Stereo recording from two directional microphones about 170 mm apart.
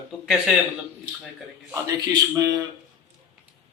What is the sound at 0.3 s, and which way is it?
Speech, centre (ahead or behind).